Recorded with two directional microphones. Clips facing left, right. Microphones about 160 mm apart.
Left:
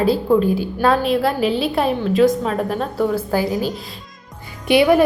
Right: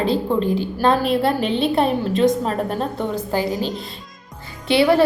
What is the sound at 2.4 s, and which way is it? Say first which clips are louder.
Speech: left 1 dB; 35° right (ahead or behind).